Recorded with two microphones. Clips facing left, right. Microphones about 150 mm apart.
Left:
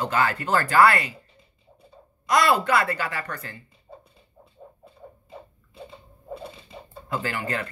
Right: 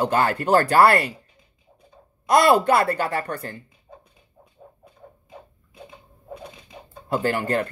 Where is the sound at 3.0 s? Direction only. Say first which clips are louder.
Right 6 dB; 30° right (ahead or behind).